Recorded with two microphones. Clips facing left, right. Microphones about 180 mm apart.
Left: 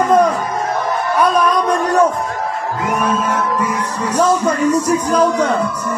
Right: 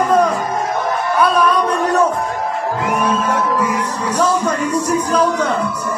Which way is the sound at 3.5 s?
10° right (ahead or behind).